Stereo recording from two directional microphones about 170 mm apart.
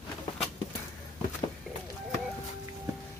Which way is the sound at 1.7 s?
Centre (ahead or behind).